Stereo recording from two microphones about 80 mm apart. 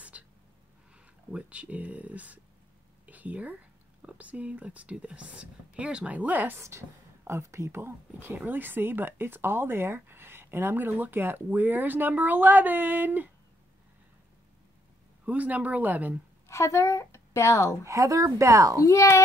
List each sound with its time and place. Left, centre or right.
0.1 s a sound: centre
0.9 s a woman's voice: centre
6.6 s speech: right
15.2 s speech: centre
16.4 s a woman's voice: left
17.8 s speech: right
18.8 s speech: left